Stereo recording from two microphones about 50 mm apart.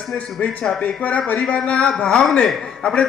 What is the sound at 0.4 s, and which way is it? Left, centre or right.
Speech, left.